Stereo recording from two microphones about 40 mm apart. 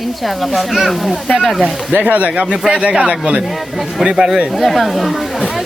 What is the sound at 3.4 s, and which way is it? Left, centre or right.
Speech, centre.